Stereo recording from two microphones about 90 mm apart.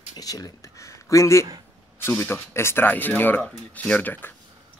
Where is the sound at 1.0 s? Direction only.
35° left (ahead or behind).